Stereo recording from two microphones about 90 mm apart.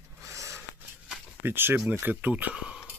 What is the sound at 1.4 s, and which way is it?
Speech, 25° right (ahead or behind).